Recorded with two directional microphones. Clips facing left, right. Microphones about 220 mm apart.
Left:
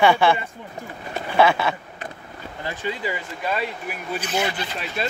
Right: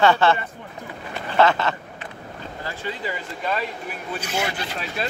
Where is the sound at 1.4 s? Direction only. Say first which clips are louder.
Even; 10° left (ahead or behind).